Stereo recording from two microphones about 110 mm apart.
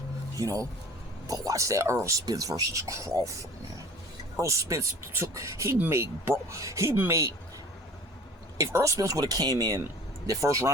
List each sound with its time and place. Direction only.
0.3 s speech: 30° right (ahead or behind)
8.5 s speech: 30° right (ahead or behind)